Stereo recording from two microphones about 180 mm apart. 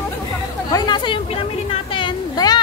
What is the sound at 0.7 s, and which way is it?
A woman's voice, 25° left (ahead or behind).